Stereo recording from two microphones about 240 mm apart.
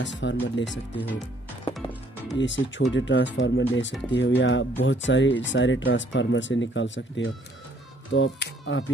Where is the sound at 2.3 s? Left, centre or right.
Left.